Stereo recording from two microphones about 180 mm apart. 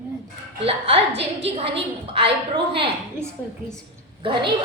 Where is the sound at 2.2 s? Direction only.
30° right (ahead or behind).